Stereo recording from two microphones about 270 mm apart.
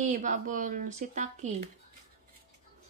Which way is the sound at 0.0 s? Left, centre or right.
Right.